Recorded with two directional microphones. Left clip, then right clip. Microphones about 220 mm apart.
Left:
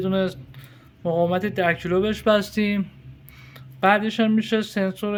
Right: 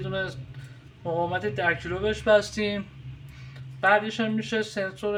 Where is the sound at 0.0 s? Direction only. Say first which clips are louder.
Left 6 dB; 55° left (ahead or behind).